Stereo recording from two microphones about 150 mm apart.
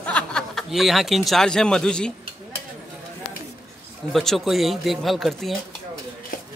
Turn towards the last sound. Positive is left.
turn(degrees=0)  # may be behind; listen again after turning